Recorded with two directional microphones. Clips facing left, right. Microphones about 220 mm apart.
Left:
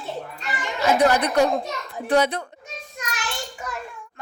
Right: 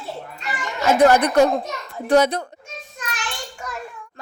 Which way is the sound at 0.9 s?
45° right (ahead or behind).